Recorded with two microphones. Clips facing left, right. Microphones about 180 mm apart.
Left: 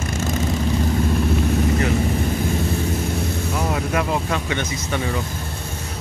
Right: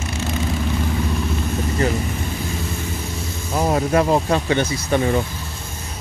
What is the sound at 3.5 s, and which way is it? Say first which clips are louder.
Speech: right 7 dB; 35° right (ahead or behind).